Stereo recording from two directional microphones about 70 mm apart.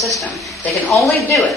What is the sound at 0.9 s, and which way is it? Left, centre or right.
Speech, left.